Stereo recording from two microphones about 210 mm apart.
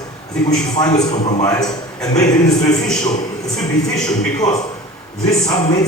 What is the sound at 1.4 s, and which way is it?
A man's voice, 15° left (ahead or behind).